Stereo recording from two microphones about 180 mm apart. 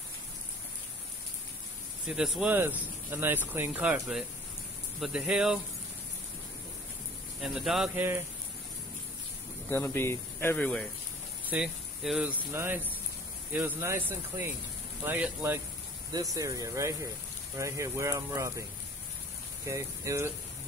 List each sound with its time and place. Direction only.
2.0 s speech: centre (ahead or behind)
7.4 s speech: centre (ahead or behind)
9.7 s speech: 10° left (ahead or behind)
11.4 s speech: 5° right (ahead or behind)
19.7 s speech: 15° right (ahead or behind)